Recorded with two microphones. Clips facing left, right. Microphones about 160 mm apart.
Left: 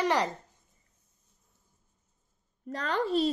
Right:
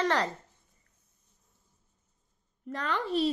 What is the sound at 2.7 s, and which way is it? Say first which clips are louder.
Speech: left 2 dB; 40° left (ahead or behind).